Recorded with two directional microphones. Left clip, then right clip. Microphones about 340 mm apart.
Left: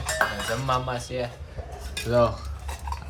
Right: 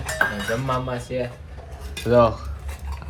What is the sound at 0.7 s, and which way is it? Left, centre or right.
Dishes, centre.